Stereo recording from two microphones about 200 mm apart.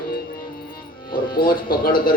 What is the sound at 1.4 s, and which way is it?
Speech, 45° left (ahead or behind).